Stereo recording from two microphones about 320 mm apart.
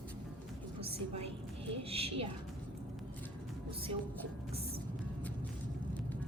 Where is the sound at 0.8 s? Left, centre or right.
Centre.